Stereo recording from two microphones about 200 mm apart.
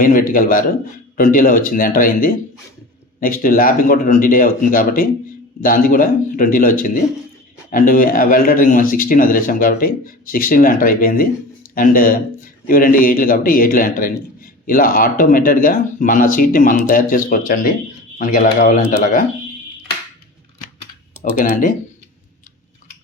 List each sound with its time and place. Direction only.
0.0 s a man's voice: 45° left (ahead or behind)
21.2 s speech: 40° left (ahead or behind)